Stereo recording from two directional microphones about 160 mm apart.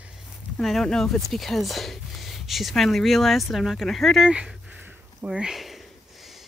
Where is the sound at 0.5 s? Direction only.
Centre (ahead or behind).